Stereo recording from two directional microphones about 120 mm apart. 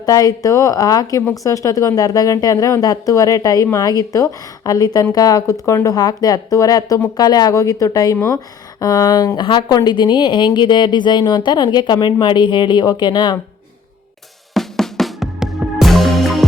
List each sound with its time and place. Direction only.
0.0 s speech: 30° left (ahead or behind)
14.5 s music: 5° left (ahead or behind)